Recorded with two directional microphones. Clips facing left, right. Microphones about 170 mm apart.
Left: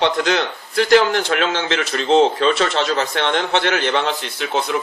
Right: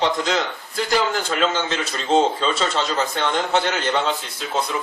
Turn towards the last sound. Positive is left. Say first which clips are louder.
# left 3 dB
turn(degrees=75)  # may be behind; listen again after turning